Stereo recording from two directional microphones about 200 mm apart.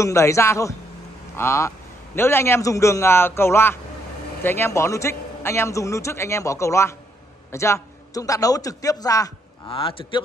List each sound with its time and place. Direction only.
0.0 s a man's voice: 15° left (ahead or behind)